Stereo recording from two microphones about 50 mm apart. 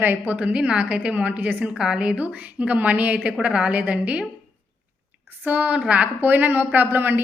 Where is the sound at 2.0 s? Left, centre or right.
Right.